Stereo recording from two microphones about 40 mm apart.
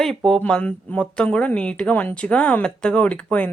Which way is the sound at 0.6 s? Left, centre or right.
Left.